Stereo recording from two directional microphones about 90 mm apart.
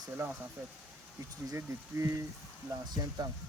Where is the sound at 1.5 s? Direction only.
30° right (ahead or behind).